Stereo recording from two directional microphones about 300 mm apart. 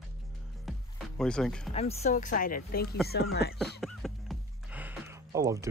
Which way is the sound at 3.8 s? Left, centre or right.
Centre.